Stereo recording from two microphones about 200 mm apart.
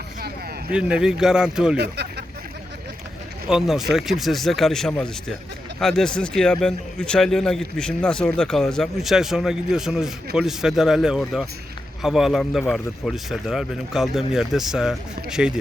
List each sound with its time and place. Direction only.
0.7 s speech: 5° right (ahead or behind)
1.8 s a sound: 55° right (ahead or behind)
3.5 s speech: centre (ahead or behind)